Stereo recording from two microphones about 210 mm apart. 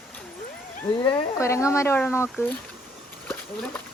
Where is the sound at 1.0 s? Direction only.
15° left (ahead or behind).